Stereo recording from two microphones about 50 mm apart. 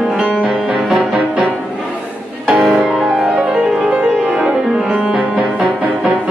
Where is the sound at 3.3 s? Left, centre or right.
Right.